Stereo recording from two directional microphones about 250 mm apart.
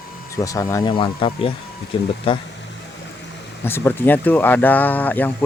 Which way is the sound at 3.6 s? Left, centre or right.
Centre.